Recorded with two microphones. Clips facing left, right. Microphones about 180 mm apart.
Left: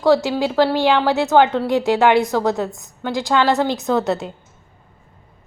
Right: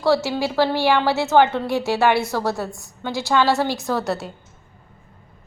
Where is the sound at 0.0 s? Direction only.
15° left (ahead or behind).